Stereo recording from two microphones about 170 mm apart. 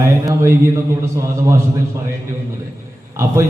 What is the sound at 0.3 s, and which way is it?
Speech, 15° right (ahead or behind).